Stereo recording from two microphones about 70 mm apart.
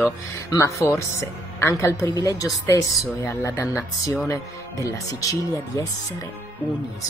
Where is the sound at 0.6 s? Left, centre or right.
Left.